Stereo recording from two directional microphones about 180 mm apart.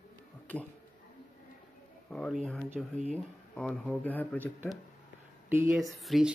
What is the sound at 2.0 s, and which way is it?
Speech, 5° left (ahead or behind).